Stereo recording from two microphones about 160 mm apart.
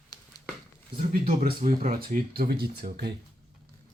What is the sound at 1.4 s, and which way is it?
Speech, 55° right (ahead or behind).